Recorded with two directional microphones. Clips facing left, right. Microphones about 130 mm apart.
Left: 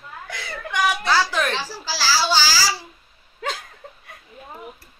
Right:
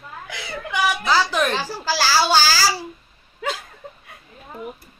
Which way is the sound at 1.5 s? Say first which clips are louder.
Right 5 dB; 50° right (ahead or behind).